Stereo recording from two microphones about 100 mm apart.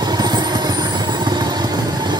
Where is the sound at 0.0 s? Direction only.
45° right (ahead or behind).